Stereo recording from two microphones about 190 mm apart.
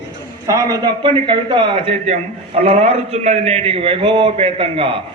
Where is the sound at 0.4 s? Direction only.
20° right (ahead or behind).